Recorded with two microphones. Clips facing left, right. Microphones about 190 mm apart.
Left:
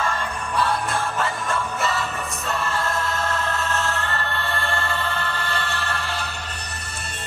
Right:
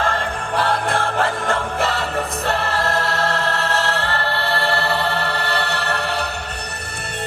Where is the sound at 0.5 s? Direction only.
65° right (ahead or behind).